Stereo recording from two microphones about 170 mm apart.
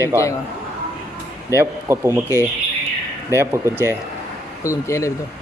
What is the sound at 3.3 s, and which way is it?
Speech, 15° right (ahead or behind).